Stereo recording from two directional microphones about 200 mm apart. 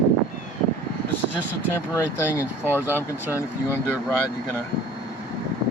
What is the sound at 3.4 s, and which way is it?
Speech, 10° left (ahead or behind).